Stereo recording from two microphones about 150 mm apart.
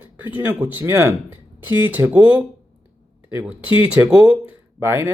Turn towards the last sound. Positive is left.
turn(degrees=-15)  # may be behind; listen again after turning